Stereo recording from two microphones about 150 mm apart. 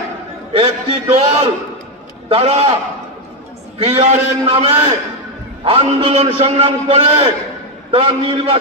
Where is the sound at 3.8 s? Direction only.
45° right (ahead or behind).